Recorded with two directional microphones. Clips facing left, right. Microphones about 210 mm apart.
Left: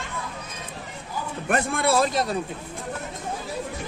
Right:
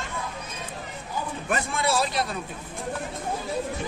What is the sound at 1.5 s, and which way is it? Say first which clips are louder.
Speech: left 4 dB; 60° left (ahead or behind).